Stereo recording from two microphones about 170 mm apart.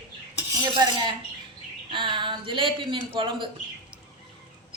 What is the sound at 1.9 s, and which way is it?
Speech, 30° right (ahead or behind).